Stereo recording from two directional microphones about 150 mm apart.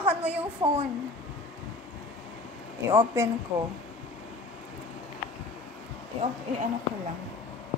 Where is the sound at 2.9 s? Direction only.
15° right (ahead or behind).